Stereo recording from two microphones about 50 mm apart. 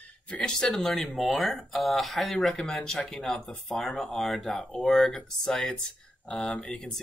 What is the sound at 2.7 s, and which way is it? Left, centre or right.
Speech, centre.